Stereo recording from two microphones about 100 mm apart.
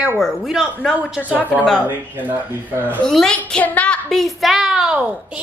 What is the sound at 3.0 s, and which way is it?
Speech, 5° left (ahead or behind).